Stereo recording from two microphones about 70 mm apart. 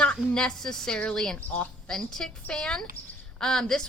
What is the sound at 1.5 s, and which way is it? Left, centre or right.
Speech, centre.